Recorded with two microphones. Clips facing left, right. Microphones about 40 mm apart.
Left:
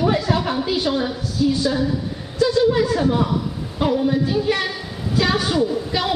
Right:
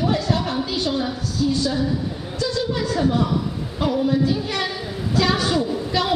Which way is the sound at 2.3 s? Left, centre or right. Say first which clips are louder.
Left 8 dB; centre.